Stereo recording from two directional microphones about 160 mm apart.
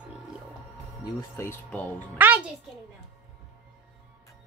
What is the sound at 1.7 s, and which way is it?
Speech, 10° left (ahead or behind).